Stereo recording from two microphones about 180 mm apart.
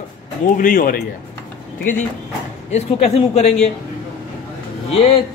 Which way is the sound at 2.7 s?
35° left (ahead or behind).